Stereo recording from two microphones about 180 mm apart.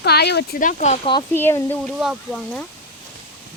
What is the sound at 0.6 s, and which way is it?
Speech, 40° left (ahead or behind).